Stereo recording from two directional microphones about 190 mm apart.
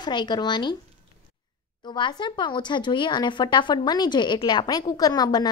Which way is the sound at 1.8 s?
25° left (ahead or behind).